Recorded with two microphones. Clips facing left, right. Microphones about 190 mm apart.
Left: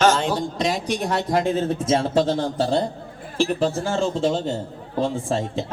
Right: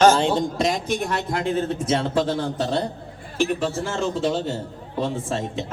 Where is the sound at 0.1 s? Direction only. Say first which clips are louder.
Right 2 dB; 30° right (ahead or behind).